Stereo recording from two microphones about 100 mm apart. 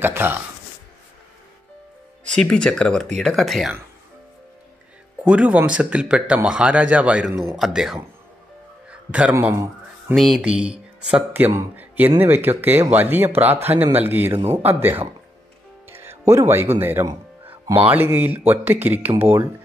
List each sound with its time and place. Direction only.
0.0 s speech: 20° right (ahead or behind)
2.3 s speech: 10° left (ahead or behind)
5.2 s speech: 15° right (ahead or behind)
9.3 s speech: 25° right (ahead or behind)
10.1 s speech: centre (ahead or behind); by 15.0 s 20° right (ahead or behind)
15.9 s music: 25° right (ahead or behind)
16.7 s speech: 25° right (ahead or behind)